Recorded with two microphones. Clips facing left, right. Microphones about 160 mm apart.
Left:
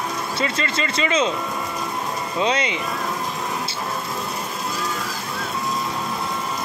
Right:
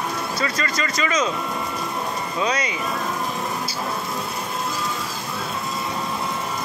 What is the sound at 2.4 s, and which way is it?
Speech, 25° left (ahead or behind).